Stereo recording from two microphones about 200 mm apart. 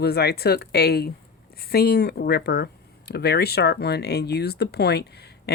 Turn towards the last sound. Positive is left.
turn(degrees=55)  # may be behind; listen again after turning